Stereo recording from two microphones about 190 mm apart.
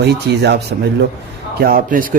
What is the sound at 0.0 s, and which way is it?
Speech, 60° right (ahead or behind).